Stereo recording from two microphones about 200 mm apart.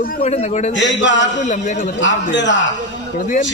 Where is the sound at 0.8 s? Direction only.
65° left (ahead or behind).